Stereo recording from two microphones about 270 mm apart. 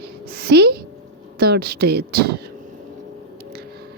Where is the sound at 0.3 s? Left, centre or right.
Right.